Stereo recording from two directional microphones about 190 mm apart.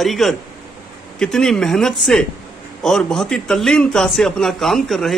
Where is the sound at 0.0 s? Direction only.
Centre (ahead or behind).